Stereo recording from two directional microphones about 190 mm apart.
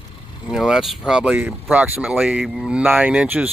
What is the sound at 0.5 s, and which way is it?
Speech, 5° right (ahead or behind).